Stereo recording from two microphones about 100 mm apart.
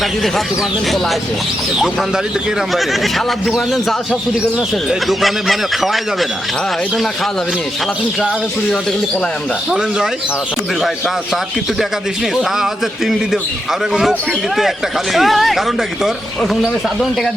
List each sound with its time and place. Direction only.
0.0 s speech: centre (ahead or behind)
1.8 s speech: centre (ahead or behind)
13.9 s speech: 5° right (ahead or behind)